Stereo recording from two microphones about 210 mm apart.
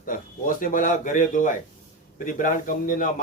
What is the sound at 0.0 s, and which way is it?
A man's voice, 40° left (ahead or behind).